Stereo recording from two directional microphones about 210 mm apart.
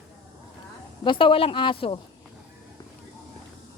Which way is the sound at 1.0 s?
25° left (ahead or behind).